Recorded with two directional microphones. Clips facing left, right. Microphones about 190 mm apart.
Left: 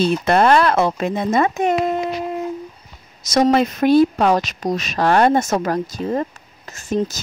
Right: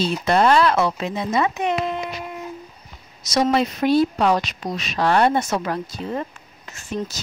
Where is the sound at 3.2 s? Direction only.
50° left (ahead or behind).